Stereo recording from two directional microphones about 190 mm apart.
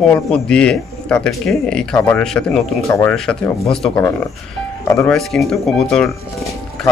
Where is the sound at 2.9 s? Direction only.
15° left (ahead or behind).